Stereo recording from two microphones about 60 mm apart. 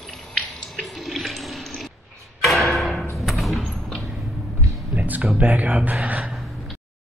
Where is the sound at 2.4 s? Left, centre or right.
Centre.